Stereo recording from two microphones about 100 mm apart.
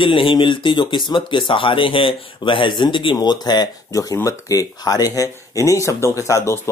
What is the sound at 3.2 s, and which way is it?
Speech, 45° left (ahead or behind).